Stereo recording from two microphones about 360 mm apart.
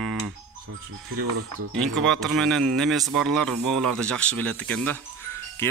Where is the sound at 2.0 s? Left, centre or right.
Centre.